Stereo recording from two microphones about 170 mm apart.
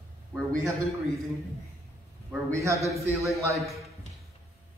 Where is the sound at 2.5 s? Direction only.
15° right (ahead or behind).